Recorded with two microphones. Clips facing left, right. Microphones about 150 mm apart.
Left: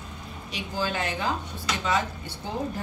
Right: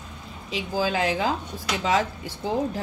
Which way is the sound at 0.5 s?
90° right.